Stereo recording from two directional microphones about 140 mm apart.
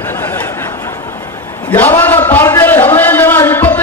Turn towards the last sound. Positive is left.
turn(degrees=15)  # may be behind; listen again after turning